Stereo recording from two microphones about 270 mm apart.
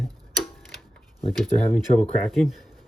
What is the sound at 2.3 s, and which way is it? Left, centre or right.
Speech, centre.